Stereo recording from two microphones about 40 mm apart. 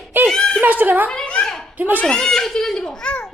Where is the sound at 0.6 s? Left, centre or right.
Right.